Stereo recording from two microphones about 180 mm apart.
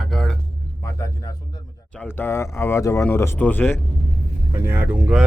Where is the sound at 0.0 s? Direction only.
Centre (ahead or behind).